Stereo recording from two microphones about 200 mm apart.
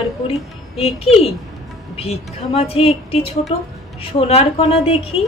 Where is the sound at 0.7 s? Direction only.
30° left (ahead or behind).